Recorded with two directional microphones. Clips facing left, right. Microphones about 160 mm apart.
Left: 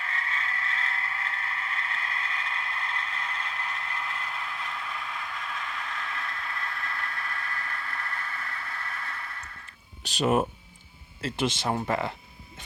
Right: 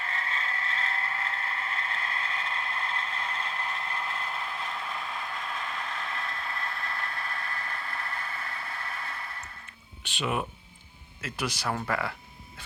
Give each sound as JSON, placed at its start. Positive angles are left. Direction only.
{"t": 0.0, "sound": "vehicle", "side_deg": -30}
{"t": 10.0, "sound": "speech", "side_deg": 40}
{"t": 11.2, "sound": "speech", "side_deg": 25}